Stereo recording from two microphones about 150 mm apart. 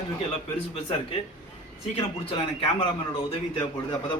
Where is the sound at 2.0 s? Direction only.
35° left (ahead or behind).